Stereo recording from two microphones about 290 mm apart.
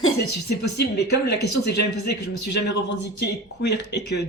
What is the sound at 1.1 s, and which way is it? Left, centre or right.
A man's voice, left.